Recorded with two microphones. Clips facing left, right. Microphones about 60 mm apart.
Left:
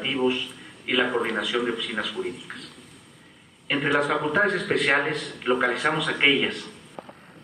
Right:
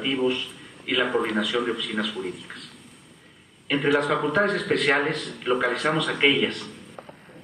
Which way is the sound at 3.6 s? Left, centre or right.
Centre.